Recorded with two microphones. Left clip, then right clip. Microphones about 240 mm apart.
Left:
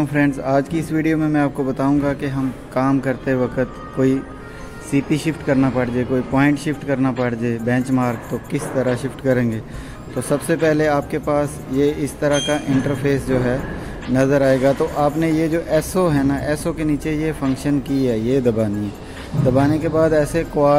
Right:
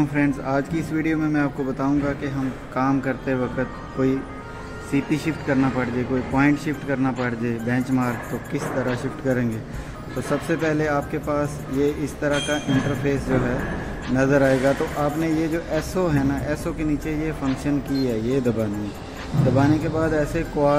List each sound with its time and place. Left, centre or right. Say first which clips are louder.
0.1 s a man's voice: left 5 dB; left